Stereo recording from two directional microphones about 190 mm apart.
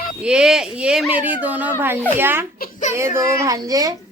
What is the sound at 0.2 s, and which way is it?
Speech, 5° right (ahead or behind).